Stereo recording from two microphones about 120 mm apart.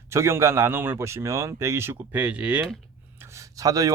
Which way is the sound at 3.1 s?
25° right (ahead or behind).